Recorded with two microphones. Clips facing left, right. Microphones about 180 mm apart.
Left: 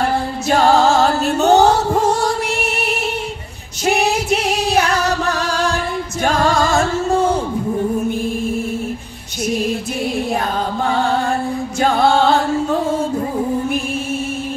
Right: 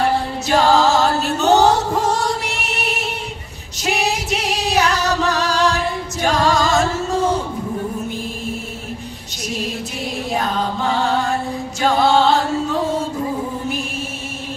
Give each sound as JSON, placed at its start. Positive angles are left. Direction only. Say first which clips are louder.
{"t": 0.5, "sound": "music", "louder": "left 1 dB", "side_deg": 55}
{"t": 3.8, "sound": "singing", "louder": "left 4 dB", "side_deg": 50}
{"t": 6.2, "sound": "music", "louder": "left 1 dB", "side_deg": 55}
{"t": 11.8, "sound": "singing", "louder": "left 1 dB", "side_deg": 55}